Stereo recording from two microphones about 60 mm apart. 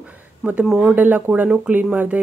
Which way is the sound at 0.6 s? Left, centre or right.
Centre.